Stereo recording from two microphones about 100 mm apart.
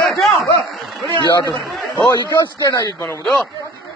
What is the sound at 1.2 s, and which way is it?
Speech, 40° left (ahead or behind).